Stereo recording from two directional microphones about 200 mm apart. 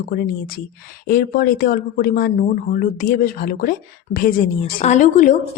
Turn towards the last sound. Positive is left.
turn(degrees=40)  # may be behind; listen again after turning